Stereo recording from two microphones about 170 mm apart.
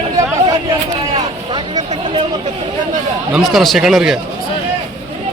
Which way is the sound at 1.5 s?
25° right (ahead or behind).